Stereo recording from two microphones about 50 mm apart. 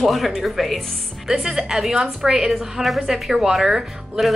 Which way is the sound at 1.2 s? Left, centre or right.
Centre.